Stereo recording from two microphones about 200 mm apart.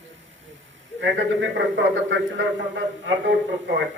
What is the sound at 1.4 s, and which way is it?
A man's voice, 65° right (ahead or behind).